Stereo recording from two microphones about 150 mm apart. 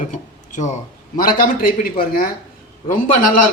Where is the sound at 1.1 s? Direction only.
75° left (ahead or behind).